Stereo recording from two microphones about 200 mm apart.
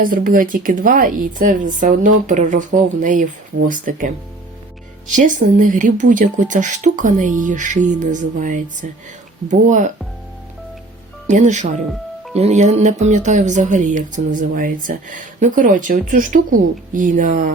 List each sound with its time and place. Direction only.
0.0 s a woman's voice: 45° right (ahead or behind)
11.3 s speech: 40° right (ahead or behind)